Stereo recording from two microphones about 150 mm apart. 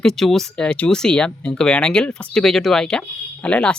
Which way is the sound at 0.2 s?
Centre (ahead or behind).